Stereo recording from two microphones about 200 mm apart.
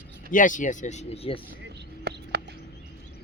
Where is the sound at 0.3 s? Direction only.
40° left (ahead or behind).